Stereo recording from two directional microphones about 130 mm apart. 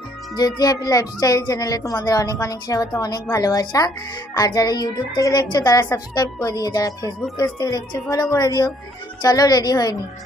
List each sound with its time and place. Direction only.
0.4 s speech: 30° left (ahead or behind)